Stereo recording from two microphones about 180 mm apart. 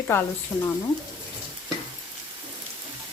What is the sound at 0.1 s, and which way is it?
Speech, 15° left (ahead or behind).